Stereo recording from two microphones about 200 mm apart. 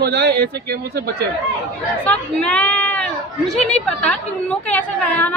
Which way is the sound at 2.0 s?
5° left (ahead or behind).